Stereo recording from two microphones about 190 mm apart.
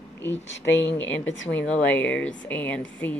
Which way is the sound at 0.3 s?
70° left (ahead or behind).